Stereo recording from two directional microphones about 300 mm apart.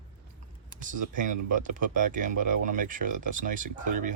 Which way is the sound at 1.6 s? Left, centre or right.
Right.